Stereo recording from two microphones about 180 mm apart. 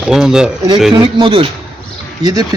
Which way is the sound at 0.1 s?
5° right (ahead or behind).